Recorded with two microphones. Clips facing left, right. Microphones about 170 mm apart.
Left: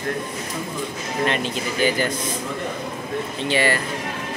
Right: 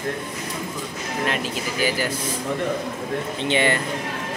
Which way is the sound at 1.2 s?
5° right (ahead or behind).